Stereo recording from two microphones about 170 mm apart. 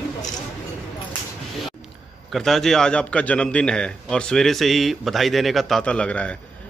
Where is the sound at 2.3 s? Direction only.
Centre (ahead or behind).